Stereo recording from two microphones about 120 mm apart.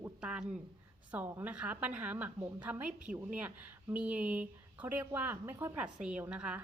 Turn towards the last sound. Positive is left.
turn(degrees=-10)  # may be behind; listen again after turning